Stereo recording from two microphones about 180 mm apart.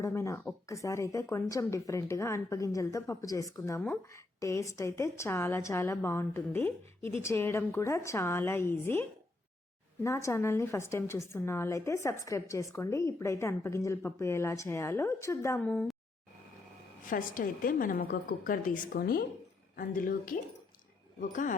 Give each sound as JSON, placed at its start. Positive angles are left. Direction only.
{"t": 0.0, "sound": "speech", "side_deg": 15}
{"t": 17.1, "sound": "a woman's voice", "side_deg": 50}